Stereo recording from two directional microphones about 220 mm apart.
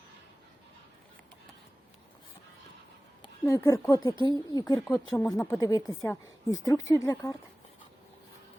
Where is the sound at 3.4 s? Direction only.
15° left (ahead or behind).